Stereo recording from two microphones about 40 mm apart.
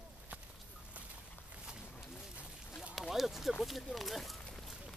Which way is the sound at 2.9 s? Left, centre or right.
Centre.